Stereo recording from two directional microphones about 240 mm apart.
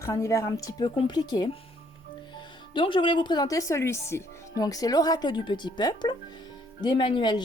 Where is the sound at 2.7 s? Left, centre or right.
Centre.